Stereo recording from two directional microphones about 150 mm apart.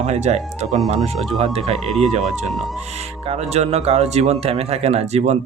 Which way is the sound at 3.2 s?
45° right (ahead or behind).